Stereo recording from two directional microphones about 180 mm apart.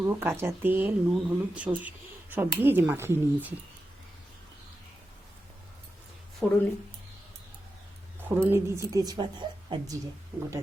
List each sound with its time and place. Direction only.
0.0 s speech: 15° right (ahead or behind)
6.4 s speech: 10° left (ahead or behind)
8.4 s a woman's voice: 15° right (ahead or behind)